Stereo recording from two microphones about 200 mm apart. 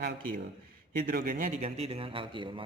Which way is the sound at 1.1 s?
45° right (ahead or behind).